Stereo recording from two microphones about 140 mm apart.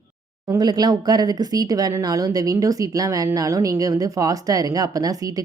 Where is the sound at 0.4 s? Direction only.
30° right (ahead or behind).